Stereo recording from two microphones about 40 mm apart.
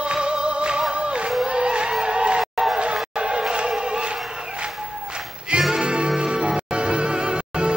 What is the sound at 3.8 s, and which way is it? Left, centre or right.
Chant, right.